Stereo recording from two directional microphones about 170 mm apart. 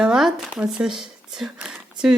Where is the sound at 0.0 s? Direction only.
5° right (ahead or behind).